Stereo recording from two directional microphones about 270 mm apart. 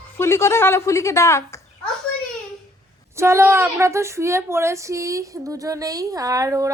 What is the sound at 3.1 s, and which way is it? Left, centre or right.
A woman's voice, centre.